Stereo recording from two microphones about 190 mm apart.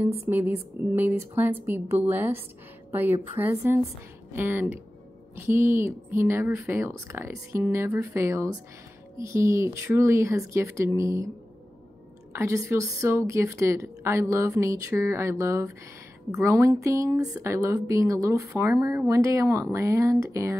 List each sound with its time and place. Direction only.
0.9 s speech: 10° right (ahead or behind)
12.3 s speech: 15° right (ahead or behind)